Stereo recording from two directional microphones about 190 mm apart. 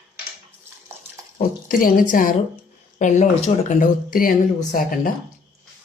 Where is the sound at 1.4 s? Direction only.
45° left (ahead or behind).